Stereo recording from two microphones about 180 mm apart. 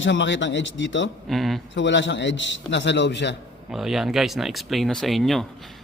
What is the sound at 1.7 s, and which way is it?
A man's voice, 85° left.